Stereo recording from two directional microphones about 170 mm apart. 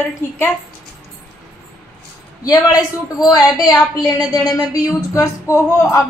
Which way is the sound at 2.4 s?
20° left (ahead or behind).